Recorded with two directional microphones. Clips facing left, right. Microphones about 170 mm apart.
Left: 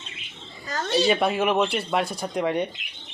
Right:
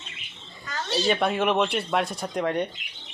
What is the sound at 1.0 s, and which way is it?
Speech, 5° left (ahead or behind).